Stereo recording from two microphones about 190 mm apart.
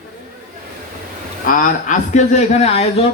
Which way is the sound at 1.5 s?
45° left (ahead or behind).